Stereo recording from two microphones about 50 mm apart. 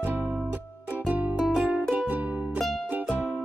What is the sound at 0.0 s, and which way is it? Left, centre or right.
Music, right.